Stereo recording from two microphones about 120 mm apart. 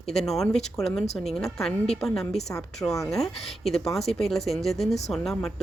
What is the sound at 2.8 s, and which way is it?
Speech, 20° left (ahead or behind).